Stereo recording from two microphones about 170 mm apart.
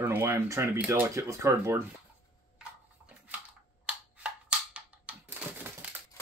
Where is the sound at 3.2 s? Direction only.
10° right (ahead or behind).